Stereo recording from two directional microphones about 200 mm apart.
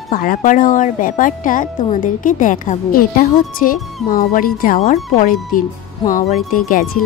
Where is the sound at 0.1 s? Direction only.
45° left (ahead or behind).